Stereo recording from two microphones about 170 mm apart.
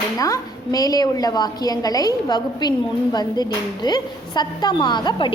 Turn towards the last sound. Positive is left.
turn(degrees=25)  # may be behind; listen again after turning